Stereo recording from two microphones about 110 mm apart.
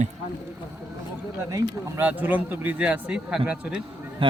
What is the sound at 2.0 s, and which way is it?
A man's voice, 15° right (ahead or behind).